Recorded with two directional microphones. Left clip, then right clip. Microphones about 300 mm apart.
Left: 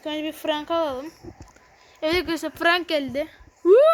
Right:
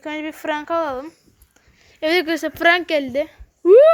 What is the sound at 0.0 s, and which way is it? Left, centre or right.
Speech, centre.